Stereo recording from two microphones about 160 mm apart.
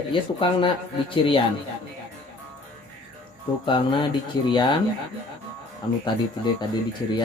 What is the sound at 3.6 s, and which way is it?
Speech, 30° left (ahead or behind).